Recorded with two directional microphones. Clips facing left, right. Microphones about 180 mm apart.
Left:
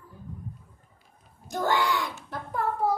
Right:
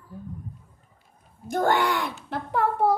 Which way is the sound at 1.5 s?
55° right (ahead or behind).